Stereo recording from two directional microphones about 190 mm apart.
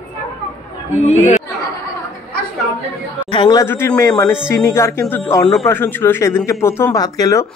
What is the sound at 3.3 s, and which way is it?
Speech, 25° left (ahead or behind).